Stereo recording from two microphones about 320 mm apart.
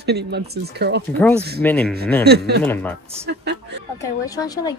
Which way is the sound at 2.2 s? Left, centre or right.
Right.